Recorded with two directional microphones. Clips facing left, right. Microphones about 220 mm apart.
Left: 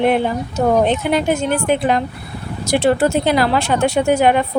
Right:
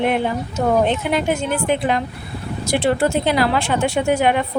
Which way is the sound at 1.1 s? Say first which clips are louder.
Left 3 dB; 40° left (ahead or behind).